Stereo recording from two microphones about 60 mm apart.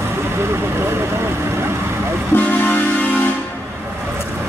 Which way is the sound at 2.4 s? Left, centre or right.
Left.